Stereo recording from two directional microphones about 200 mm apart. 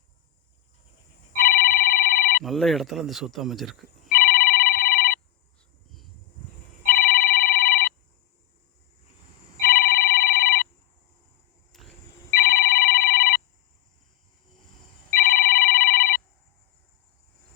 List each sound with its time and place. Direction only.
1.4 s telephone bell ringing: 45° left (ahead or behind)
2.4 s speech: centre (ahead or behind)
4.1 s telephone bell ringing: 45° left (ahead or behind)
6.8 s telephone bell ringing: 45° left (ahead or behind)
9.6 s telephone bell ringing: 45° left (ahead or behind)
11.7 s a sound: centre (ahead or behind)
12.3 s telephone bell ringing: 45° left (ahead or behind)
15.1 s telephone bell ringing: 45° left (ahead or behind)